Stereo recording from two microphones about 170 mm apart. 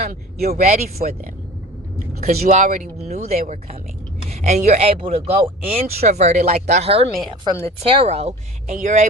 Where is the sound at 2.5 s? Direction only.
45° right (ahead or behind).